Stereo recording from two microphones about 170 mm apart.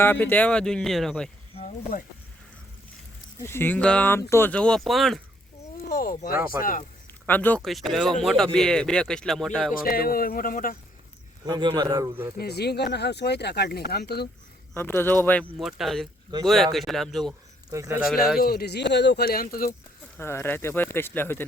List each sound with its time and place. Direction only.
0.0 s speech: 10° left (ahead or behind)
1.6 s speech: 55° left (ahead or behind)
3.4 s speech: 15° left (ahead or behind)
5.9 s speech: 60° left (ahead or behind)
7.3 s speech: 10° left (ahead or behind)
9.8 s speech: 60° left (ahead or behind)
11.4 s speech: 25° right (ahead or behind)
12.4 s speech: 70° left (ahead or behind)
14.7 s speech: 15° left (ahead or behind)
17.7 s speech: 15° right (ahead or behind)
18.3 s speech: 65° left (ahead or behind)
20.1 s speech: 15° left (ahead or behind)